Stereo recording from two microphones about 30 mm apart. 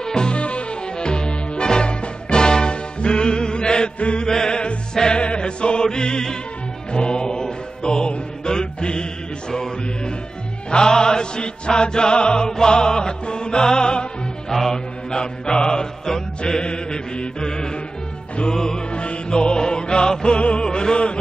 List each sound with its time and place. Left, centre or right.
0.0 s music: left
0.4 s music: left
0.9 s music: left
14.5 s music: centre
15.0 s music: left
16.6 s mantra: left
18.5 s music: left
18.9 s music: left